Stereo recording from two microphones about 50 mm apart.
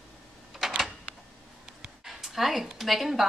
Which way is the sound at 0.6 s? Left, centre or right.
Centre.